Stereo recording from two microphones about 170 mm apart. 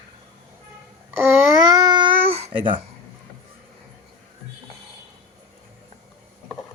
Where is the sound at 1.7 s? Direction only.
25° right (ahead or behind).